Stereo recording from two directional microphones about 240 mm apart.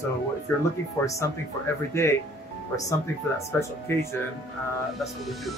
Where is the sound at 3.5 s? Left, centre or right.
Centre.